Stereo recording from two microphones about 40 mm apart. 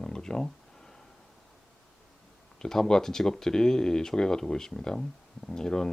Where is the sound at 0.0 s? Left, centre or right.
Centre.